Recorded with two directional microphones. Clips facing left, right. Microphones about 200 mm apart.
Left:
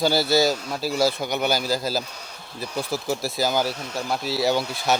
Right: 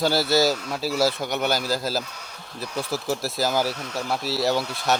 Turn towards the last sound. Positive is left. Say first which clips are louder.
# left 1 dB
turn(degrees=0)  # may be behind; listen again after turning